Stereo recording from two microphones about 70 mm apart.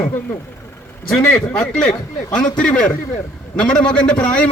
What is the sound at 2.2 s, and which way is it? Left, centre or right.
Speech, left.